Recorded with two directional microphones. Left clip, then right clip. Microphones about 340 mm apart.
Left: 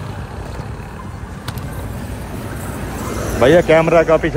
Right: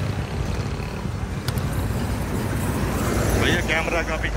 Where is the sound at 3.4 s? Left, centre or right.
Centre.